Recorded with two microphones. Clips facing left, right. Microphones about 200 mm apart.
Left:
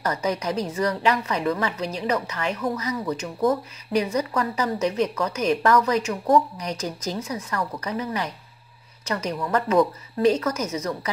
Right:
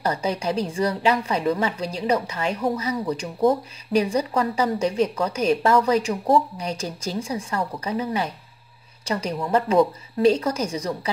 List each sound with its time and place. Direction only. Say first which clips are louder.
0.0 s a woman's voice: right 1 dB; 30° right (ahead or behind)